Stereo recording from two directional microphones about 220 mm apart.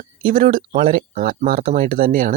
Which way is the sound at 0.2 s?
40° right (ahead or behind).